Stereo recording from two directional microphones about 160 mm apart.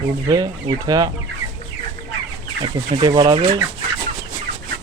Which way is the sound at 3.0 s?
25° right (ahead or behind).